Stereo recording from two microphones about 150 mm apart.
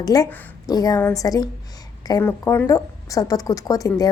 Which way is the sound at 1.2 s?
25° left (ahead or behind).